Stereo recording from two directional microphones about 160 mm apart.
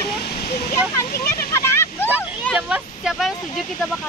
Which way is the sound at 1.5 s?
15° left (ahead or behind).